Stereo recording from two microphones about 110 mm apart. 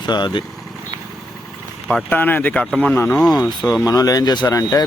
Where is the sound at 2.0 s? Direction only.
15° left (ahead or behind).